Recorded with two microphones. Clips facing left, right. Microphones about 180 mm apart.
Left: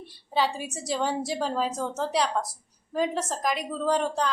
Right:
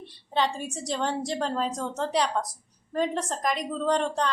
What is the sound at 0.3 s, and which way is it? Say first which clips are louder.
A woman's voice: even; 5° left (ahead or behind).